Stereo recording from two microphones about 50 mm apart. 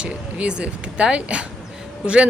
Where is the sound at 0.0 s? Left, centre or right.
Right.